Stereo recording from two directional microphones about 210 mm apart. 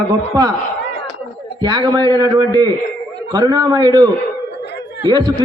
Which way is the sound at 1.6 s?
20° right (ahead or behind).